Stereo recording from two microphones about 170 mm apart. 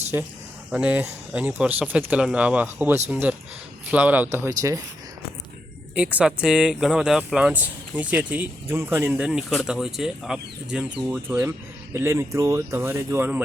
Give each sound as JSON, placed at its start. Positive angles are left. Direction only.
{"t": 0.1, "sound": "speech", "side_deg": -15}
{"t": 5.9, "sound": "speech", "side_deg": -10}